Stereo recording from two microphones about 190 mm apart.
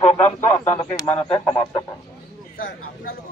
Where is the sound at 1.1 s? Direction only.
5° left (ahead or behind).